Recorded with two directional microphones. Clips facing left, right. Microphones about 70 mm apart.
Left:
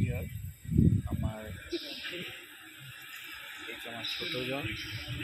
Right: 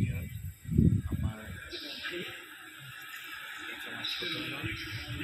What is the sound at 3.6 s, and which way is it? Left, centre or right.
Speech, right.